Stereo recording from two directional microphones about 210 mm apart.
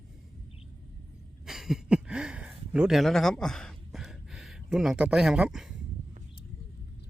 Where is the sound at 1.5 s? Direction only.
Centre (ahead or behind).